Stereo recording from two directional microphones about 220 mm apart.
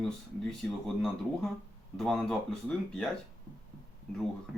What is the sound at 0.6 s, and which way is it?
Speech, 5° left (ahead or behind).